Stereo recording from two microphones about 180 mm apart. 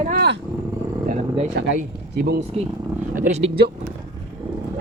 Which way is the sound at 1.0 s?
40° right (ahead or behind).